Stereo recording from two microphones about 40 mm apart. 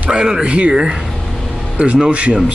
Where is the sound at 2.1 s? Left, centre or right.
Right.